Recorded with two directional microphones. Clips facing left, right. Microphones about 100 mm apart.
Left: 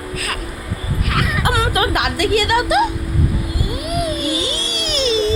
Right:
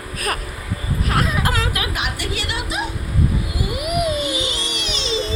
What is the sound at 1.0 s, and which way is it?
Baby cry, 30° right (ahead or behind).